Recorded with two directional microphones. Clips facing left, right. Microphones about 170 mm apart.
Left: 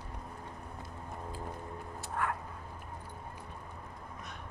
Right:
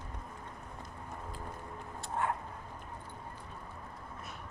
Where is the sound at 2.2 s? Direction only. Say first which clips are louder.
Right 1 dB; 25° right (ahead or behind).